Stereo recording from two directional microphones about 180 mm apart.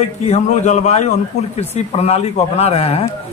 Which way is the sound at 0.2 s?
35° left (ahead or behind).